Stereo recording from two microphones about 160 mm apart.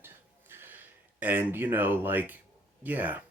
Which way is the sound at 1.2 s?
10° right (ahead or behind).